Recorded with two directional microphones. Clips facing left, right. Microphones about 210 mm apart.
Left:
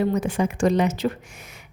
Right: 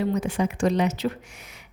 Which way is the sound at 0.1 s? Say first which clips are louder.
Left 2 dB; 50° left (ahead or behind).